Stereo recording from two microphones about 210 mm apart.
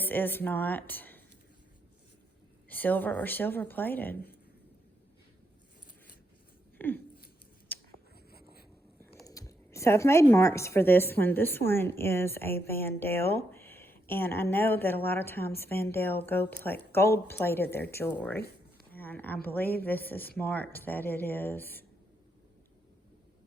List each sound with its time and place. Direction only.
0.0 s speech: 10° left (ahead or behind)
2.6 s speech: 10° left (ahead or behind)
6.7 s a sound: 10° left (ahead or behind)
8.3 s writing: 45° left (ahead or behind)
9.2 s speech: 15° left (ahead or behind)
18.9 s a sound: 10° left (ahead or behind)
19.5 s speech: 10° left (ahead or behind)